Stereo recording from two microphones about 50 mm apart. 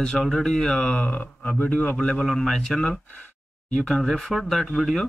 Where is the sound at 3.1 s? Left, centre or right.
Left.